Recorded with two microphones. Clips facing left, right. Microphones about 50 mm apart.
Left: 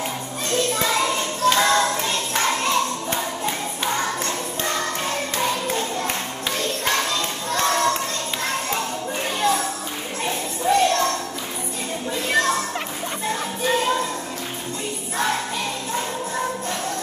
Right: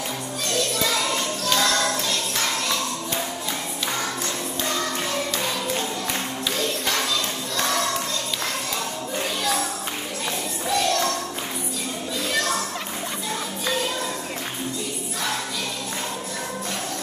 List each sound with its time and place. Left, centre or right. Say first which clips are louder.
0.5 s music: left 3 dB; left
9.4 s music: left 6 dB; left
10.2 s a sound: left 7 dB; left
12.3 s music: left 5 dB; left